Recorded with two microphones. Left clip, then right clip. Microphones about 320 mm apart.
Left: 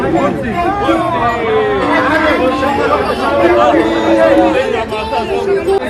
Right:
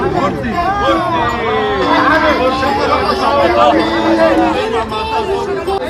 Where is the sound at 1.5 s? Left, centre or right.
Right.